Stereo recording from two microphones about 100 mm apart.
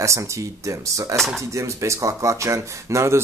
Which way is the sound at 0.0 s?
30° right (ahead or behind).